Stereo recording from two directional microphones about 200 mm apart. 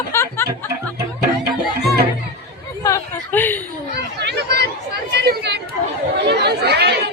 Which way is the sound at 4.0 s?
55° right (ahead or behind).